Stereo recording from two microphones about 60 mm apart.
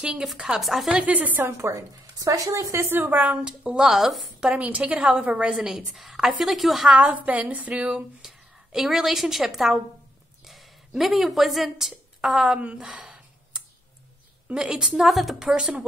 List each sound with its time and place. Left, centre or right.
0.0 s speech: centre
0.9 s a woman's voice: right
1.4 s speech: right
3.0 s a woman's voice: right
3.4 s a woman's voice: centre
4.6 s a woman's voice: right; by 6.9 s centre
6.9 s a woman's voice: right
8.2 s a woman's voice: centre
14.5 s speech: centre
15.0 s a woman's voice: centre
15.4 s speech: centre